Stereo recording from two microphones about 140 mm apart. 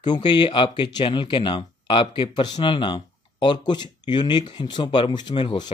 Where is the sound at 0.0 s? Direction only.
30° left (ahead or behind).